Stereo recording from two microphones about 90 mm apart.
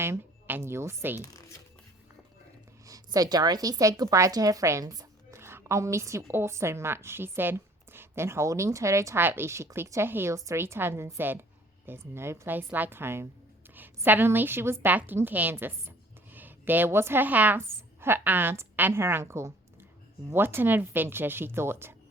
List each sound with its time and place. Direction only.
0.0 s speech: 25° right (ahead or behind)
2.8 s a woman's voice: 40° right (ahead or behind)
5.4 s a woman's voice: 30° right (ahead or behind)